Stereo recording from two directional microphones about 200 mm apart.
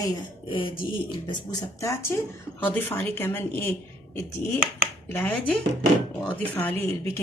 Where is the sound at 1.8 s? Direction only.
15° left (ahead or behind).